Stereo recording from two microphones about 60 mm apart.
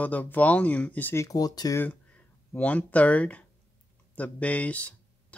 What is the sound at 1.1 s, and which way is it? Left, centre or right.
Speech, left.